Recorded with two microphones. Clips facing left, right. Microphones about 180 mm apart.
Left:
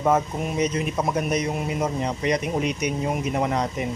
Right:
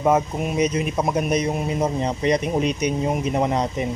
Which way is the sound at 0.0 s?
15° right (ahead or behind).